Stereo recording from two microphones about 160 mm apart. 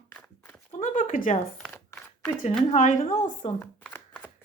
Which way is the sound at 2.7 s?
55° left (ahead or behind).